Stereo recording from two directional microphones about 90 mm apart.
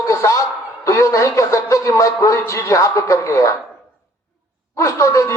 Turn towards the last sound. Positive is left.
turn(degrees=35)  # may be behind; listen again after turning